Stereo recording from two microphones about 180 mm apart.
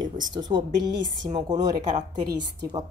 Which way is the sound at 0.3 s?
25° right (ahead or behind).